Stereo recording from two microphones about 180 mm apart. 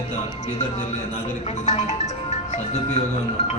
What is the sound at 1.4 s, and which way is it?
Music, 35° left (ahead or behind).